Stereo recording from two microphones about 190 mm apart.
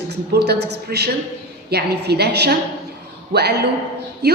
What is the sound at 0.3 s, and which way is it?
A woman's voice, 60° right (ahead or behind).